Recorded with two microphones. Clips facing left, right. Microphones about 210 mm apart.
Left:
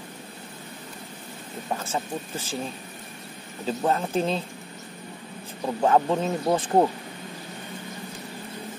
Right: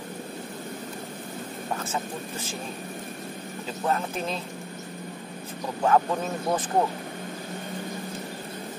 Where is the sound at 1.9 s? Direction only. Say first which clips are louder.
Left 2 dB; 30° left (ahead or behind).